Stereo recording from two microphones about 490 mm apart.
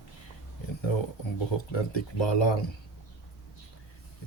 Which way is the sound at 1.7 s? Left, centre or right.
Left.